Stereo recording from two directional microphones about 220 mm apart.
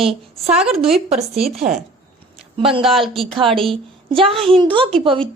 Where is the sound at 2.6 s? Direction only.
25° right (ahead or behind).